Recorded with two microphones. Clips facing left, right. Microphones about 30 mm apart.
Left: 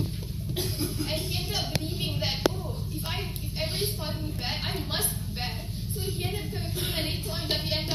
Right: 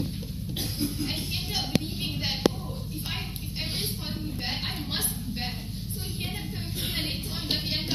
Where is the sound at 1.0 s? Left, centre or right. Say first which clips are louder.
Even; right.